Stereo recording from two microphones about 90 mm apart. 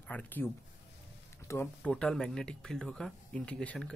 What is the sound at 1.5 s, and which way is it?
Speech, 35° left (ahead or behind).